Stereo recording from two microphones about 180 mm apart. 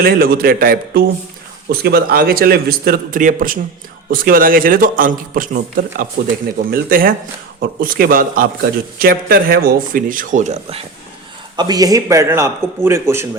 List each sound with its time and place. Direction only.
0.0 s a man's voice: 60° right (ahead or behind); by 10.8 s 35° right (ahead or behind)
11.5 s a man's voice: 20° right (ahead or behind)